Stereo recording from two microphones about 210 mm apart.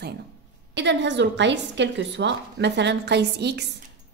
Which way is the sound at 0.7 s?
60° right (ahead or behind).